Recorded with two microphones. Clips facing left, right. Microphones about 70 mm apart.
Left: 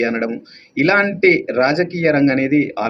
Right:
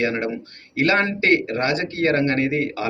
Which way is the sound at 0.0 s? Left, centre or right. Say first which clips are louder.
Left 4 dB; left.